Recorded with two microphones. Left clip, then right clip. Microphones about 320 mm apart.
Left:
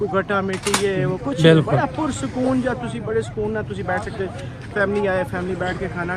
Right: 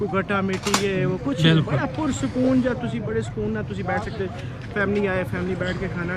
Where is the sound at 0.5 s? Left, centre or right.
Left.